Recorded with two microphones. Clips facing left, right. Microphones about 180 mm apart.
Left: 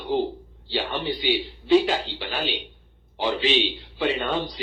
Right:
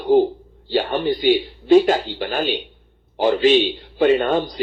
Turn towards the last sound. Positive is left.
turn(degrees=-50)  # may be behind; listen again after turning